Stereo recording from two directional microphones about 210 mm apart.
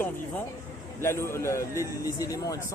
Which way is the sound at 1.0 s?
10° left (ahead or behind).